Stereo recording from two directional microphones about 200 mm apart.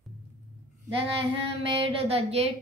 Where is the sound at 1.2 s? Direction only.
30° right (ahead or behind).